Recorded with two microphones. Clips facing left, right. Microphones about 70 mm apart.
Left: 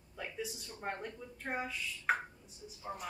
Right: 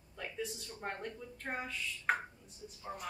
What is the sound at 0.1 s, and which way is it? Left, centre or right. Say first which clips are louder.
A woman's voice: even; centre.